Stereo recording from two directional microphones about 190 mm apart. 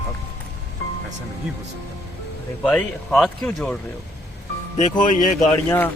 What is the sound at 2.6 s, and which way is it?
Speech, 5° left (ahead or behind).